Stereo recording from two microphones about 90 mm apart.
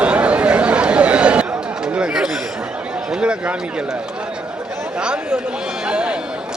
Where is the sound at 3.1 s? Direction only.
10° right (ahead or behind).